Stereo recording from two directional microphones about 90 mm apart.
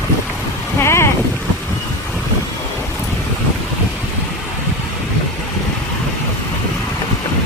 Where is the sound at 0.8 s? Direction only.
30° left (ahead or behind).